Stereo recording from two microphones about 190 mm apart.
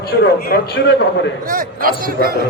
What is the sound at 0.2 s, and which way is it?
A man's voice, 55° left (ahead or behind).